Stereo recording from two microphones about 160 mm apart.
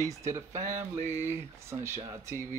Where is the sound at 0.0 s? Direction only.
20° right (ahead or behind).